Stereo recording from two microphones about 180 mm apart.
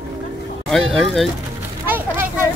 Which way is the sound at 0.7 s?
Centre (ahead or behind).